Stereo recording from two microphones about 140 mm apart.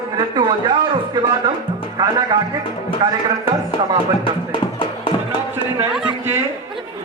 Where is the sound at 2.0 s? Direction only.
30° right (ahead or behind).